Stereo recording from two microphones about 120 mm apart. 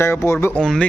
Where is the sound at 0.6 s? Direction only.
5° left (ahead or behind).